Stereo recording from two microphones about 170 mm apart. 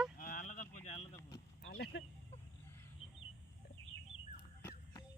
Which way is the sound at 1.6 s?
75° left (ahead or behind).